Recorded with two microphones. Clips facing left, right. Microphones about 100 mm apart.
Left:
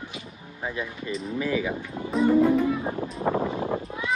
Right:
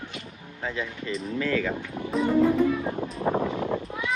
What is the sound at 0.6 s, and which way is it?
Speech, 15° left (ahead or behind).